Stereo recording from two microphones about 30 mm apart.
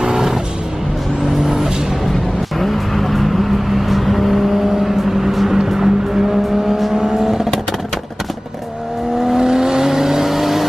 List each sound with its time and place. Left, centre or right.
0.0 s music: centre
1.2 s vehicle: centre
2.6 s vehicle: centre
9.2 s vehicle: centre